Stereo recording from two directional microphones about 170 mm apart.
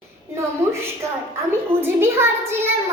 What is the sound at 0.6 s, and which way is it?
Child singing, 15° right (ahead or behind).